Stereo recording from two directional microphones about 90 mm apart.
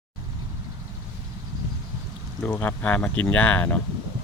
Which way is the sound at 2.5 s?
20° left (ahead or behind).